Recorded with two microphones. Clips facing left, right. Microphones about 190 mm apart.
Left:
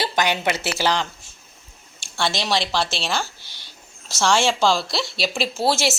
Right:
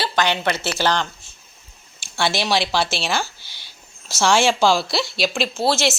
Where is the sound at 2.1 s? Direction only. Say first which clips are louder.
Right 2 dB; 5° right (ahead or behind).